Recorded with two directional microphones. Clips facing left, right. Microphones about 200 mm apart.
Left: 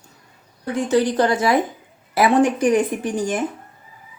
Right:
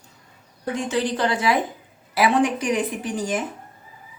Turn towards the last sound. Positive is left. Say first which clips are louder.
# left 3 dB
turn(degrees=50)  # may be behind; listen again after turning